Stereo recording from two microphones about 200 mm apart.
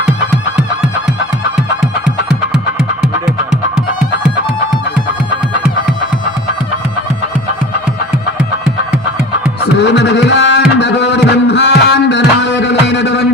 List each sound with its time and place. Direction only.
3.0 s music: 5° right (ahead or behind)
9.7 s tabla: 60° left (ahead or behind)
10.8 s music: 60° left (ahead or behind)